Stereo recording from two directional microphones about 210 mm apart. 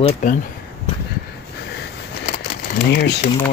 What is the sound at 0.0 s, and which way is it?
Speech, 40° left (ahead or behind).